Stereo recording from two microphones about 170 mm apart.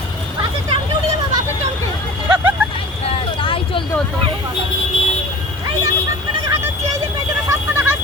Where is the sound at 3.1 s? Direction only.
30° left (ahead or behind).